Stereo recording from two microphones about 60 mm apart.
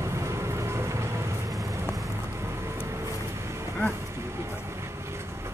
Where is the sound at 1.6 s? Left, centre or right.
Right.